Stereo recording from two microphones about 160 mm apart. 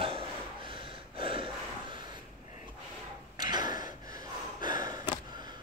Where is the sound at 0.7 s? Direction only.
35° right (ahead or behind).